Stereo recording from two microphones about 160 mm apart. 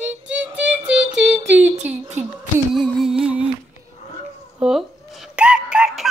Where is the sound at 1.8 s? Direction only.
45° right (ahead or behind).